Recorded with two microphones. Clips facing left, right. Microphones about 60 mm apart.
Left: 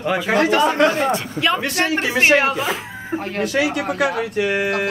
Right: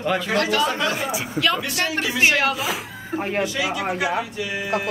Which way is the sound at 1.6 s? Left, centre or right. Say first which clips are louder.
Left 4 dB; left.